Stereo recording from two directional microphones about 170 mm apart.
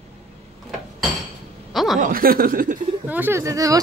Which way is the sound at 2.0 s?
60° right (ahead or behind).